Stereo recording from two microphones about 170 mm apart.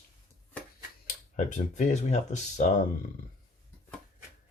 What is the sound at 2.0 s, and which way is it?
Speech, 40° left (ahead or behind).